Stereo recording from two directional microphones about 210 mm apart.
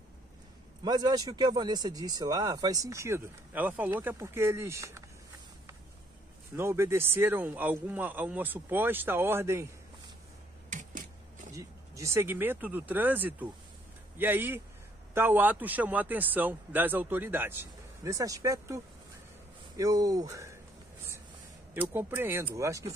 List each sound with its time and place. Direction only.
0.8 s speech: 20° right (ahead or behind)
6.5 s speech: 10° right (ahead or behind)
10.7 s a sound: 35° right (ahead or behind)
11.5 s speech: 15° right (ahead or behind)
19.8 s speech: 15° right (ahead or behind)
21.7 s speech: 10° right (ahead or behind)